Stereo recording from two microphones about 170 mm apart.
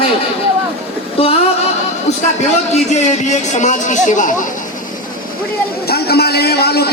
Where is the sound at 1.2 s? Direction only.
35° left (ahead or behind).